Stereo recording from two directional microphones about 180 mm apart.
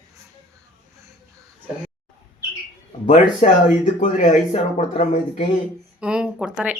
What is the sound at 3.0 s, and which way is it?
Speech, 45° left (ahead or behind).